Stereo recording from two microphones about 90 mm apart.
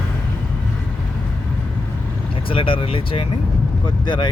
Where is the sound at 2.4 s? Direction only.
75° left (ahead or behind).